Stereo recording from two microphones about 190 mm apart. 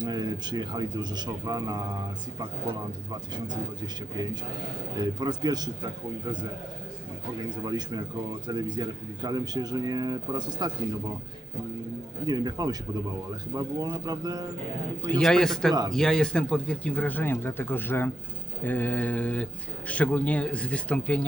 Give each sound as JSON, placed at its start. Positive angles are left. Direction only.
{"t": 0.0, "sound": "a man's voice", "side_deg": -20}
{"t": 4.9, "sound": "a man's voice", "side_deg": -20}
{"t": 7.6, "sound": "a man's voice", "side_deg": -20}
{"t": 12.2, "sound": "a man's voice", "side_deg": -20}
{"t": 15.0, "sound": "a man's voice", "side_deg": 5}